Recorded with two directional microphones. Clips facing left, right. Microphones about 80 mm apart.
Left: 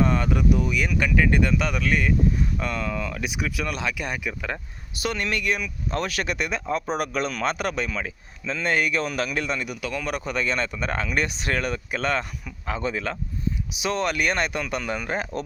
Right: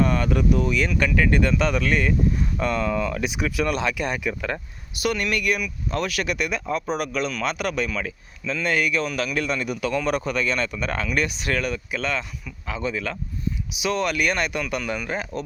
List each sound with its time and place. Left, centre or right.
0.0 s speech: left
4.9 s speech: left
9.4 s speech: centre
9.6 s speech: centre
10.2 s speech: left